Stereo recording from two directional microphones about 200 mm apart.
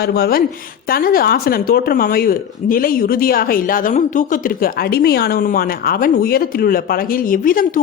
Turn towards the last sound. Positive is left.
turn(degrees=45)  # may be behind; listen again after turning